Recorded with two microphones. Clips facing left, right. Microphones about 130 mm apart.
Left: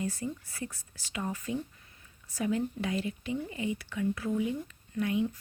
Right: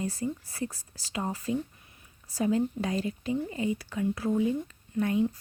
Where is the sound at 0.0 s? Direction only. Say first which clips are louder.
Right 3 dB; 35° right (ahead or behind).